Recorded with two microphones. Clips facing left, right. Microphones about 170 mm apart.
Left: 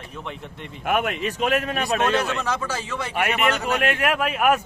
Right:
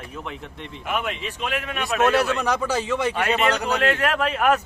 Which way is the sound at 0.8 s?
55° left (ahead or behind).